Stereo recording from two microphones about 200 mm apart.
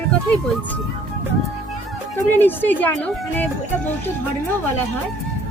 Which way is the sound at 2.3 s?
10° left (ahead or behind).